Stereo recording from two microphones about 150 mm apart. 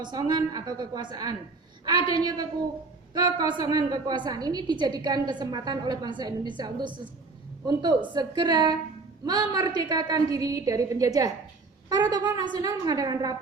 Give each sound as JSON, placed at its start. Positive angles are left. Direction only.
{"t": 0.0, "sound": "a woman's voice", "side_deg": -30}